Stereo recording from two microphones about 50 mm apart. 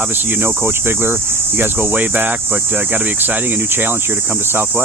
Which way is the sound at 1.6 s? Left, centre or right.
Right.